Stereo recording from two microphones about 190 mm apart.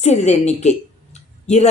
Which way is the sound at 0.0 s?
35° left (ahead or behind).